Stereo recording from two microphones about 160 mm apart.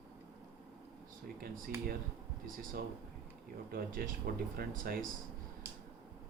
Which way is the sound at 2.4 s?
60° right (ahead or behind).